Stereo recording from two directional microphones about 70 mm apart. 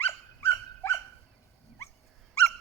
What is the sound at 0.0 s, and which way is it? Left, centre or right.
Dog, left.